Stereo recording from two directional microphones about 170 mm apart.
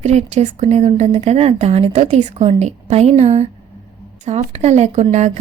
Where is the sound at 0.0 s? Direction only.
40° right (ahead or behind).